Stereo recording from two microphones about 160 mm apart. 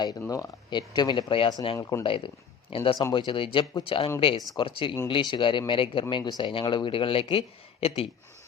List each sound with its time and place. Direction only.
0.2 s speech: 20° left (ahead or behind)
2.0 s speech: 35° left (ahead or behind)